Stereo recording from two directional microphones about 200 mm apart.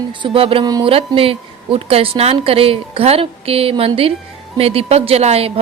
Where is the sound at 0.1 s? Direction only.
25° right (ahead or behind).